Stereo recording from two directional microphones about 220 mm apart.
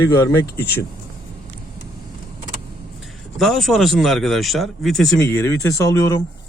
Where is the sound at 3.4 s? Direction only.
Centre (ahead or behind).